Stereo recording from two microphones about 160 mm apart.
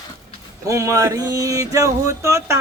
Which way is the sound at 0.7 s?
20° right (ahead or behind).